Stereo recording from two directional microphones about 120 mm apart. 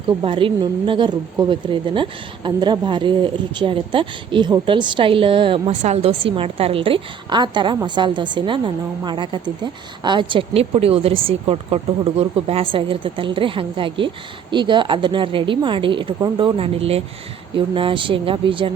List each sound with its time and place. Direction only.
0.2 s speech: 45° right (ahead or behind)
5.8 s a woman's voice: 60° right (ahead or behind)